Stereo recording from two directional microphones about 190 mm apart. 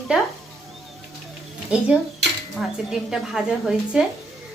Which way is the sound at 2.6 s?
Centre (ahead or behind).